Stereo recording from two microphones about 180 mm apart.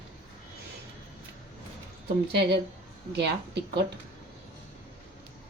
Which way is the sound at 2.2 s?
70° right (ahead or behind).